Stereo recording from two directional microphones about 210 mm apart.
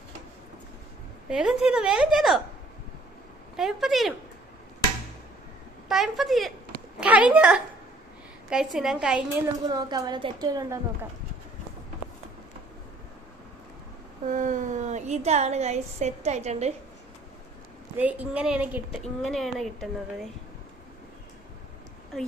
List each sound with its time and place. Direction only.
1.3 s speech: 5° right (ahead or behind)
3.6 s speech: centre (ahead or behind)
5.9 s speech: centre (ahead or behind)
9.6 s a woman's voice: 20° right (ahead or behind)
14.3 s a woman's voice: 35° right (ahead or behind)
17.9 s a woman's voice: 5° right (ahead or behind)